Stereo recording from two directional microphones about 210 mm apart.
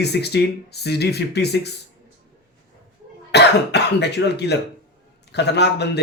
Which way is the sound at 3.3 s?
55° left (ahead or behind).